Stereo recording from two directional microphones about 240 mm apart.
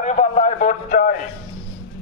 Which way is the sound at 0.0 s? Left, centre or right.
Left.